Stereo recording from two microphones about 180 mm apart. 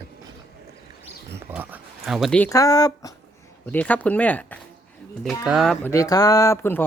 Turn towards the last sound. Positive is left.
turn(degrees=10)  # may be behind; listen again after turning